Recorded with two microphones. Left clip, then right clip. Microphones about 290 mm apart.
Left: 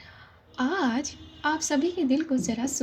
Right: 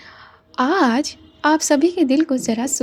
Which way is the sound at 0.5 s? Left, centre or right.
Right.